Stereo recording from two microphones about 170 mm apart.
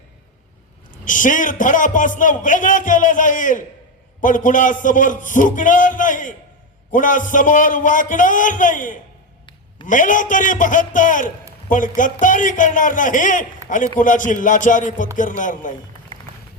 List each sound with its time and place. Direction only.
1.0 s a man's voice: 50° left (ahead or behind)